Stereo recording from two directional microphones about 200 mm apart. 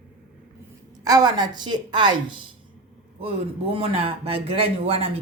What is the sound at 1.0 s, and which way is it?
A woman's voice, 20° right (ahead or behind).